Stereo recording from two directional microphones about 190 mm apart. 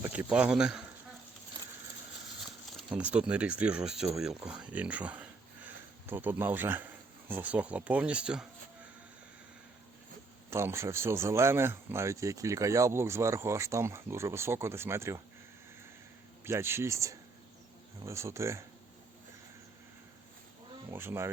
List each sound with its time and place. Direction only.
0.0 s speech: 10° right (ahead or behind)
2.4 s speech: 5° right (ahead or behind)
10.5 s speech: 15° right (ahead or behind)
16.4 s speech: 15° right (ahead or behind)
20.9 s speech: 10° right (ahead or behind)